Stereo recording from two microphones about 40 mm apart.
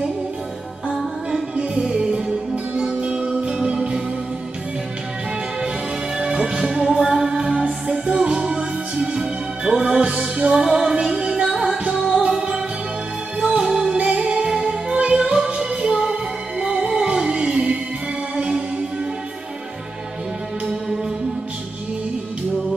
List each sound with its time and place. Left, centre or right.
1.6 s music: right
6.1 s music: centre
7.5 s music: right
11.4 s music: centre
11.9 s music: right
13.7 s music: centre
13.9 s music: right